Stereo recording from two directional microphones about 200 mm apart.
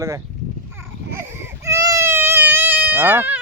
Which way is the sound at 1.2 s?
10° right (ahead or behind).